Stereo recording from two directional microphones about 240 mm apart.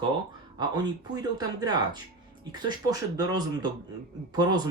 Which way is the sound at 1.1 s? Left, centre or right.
Centre.